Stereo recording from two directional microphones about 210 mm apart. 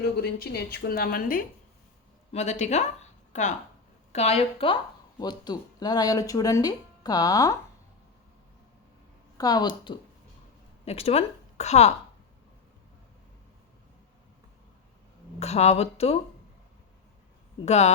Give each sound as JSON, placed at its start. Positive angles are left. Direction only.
{"t": 0.0, "sound": "a woman's voice", "side_deg": 45}
{"t": 2.3, "sound": "a woman's voice", "side_deg": 35}
{"t": 9.4, "sound": "a woman's voice", "side_deg": 20}
{"t": 15.4, "sound": "speech", "side_deg": 30}
{"t": 17.7, "sound": "speech", "side_deg": 30}